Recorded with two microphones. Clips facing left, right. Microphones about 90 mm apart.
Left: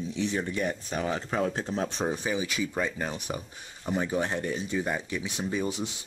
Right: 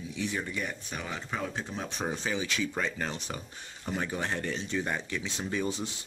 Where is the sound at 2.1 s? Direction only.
15° left (ahead or behind).